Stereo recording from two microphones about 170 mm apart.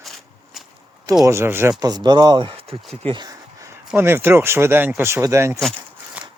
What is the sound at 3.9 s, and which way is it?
Speech, 15° right (ahead or behind).